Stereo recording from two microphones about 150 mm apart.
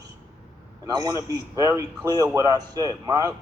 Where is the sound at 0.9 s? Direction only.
25° right (ahead or behind).